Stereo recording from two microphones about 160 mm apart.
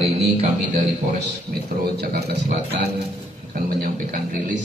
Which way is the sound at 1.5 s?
80° right.